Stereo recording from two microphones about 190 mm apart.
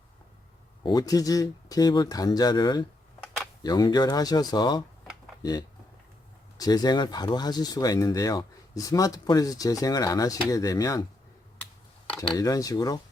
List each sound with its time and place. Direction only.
0.8 s speech: 20° left (ahead or behind)
12.0 s a sound: 5° left (ahead or behind)
12.4 s speech: 20° left (ahead or behind)